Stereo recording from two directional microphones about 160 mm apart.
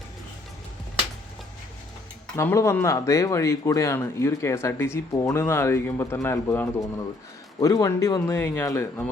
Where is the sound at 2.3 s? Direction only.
15° left (ahead or behind).